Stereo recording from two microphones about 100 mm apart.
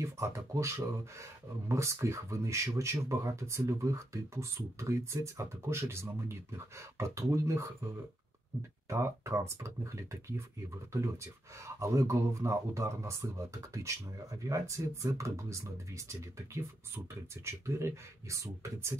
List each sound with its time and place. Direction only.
0.0 s speech: 30° right (ahead or behind)
11.6 s speech: 30° right (ahead or behind)